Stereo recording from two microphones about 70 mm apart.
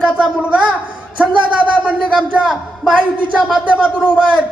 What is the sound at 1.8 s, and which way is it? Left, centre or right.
A man's voice, centre.